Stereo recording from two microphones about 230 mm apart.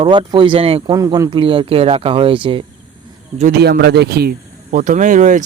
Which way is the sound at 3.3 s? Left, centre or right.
Right.